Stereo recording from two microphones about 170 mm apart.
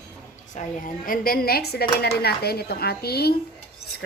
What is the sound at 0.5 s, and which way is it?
Speech, 55° left (ahead or behind).